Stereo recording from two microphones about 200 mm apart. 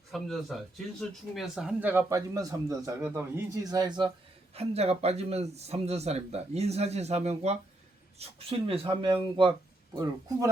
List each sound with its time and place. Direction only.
0.1 s speech: centre (ahead or behind); by 10.5 s 20° right (ahead or behind)